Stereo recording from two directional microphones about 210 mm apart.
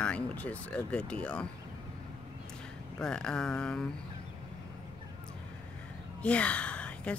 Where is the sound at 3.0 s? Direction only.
5° left (ahead or behind).